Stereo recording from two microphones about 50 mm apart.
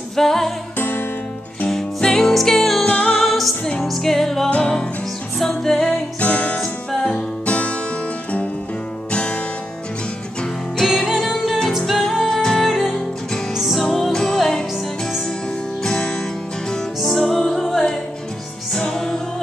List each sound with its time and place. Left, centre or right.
0.1 s music: centre
0.7 s music: left
1.7 s music: centre
2.8 s music: left
3.2 s music: centre
4.5 s music: left
5.4 s music: centre
6.1 s music: left
6.6 s music: centre
9.1 s music: left
11.1 s music: centre
15.8 s music: centre
17.0 s music: centre